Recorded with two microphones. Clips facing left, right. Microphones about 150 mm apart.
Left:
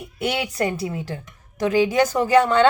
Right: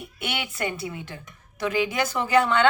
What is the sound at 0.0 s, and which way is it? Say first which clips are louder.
A woman's voice: left 7 dB; 35° left (ahead or behind).